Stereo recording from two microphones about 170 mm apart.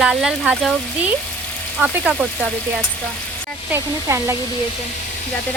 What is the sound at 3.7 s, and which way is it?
Speech, 15° right (ahead or behind).